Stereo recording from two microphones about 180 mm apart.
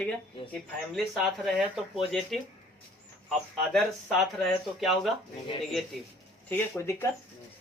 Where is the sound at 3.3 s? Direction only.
Centre (ahead or behind).